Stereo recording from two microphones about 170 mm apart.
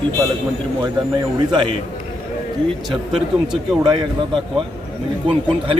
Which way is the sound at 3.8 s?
25° right (ahead or behind).